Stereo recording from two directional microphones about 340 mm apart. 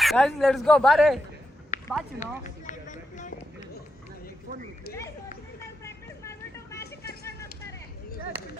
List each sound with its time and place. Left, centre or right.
0.0 s speech: centre
1.7 s a sound: left
2.4 s run: left
5.8 s vehicle: centre